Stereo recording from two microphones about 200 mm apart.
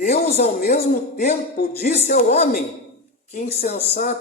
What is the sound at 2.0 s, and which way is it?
Speech, 35° left (ahead or behind).